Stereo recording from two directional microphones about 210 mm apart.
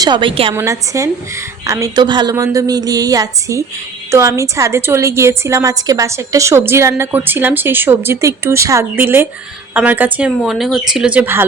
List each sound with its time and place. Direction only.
0.0 s a woman's voice: 20° right (ahead or behind)
0.5 s a woman's voice: 15° right (ahead or behind)